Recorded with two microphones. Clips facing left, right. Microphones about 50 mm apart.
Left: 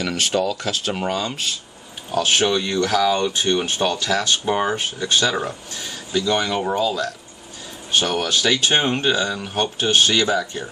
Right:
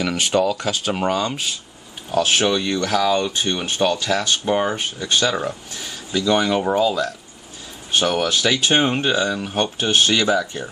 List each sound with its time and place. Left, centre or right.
0.0 s speech: centre
6.1 s speech: centre